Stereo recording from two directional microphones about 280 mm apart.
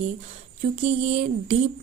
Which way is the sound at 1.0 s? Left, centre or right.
Right.